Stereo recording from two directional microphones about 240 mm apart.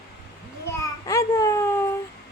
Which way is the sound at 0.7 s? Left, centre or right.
Centre.